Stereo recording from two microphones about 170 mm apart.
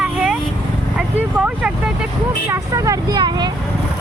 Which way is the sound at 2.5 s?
20° right (ahead or behind).